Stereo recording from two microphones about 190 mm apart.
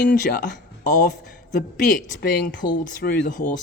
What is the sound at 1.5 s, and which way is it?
Speech, 45° left (ahead or behind).